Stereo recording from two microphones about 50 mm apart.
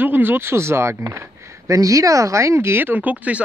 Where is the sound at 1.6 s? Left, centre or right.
Right.